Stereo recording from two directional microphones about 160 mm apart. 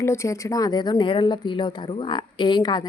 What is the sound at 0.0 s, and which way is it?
Speech, 15° left (ahead or behind).